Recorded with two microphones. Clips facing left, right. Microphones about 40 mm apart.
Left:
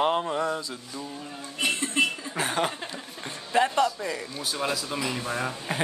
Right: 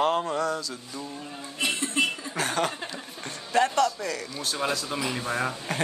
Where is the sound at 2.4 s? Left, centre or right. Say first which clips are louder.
Even; centre.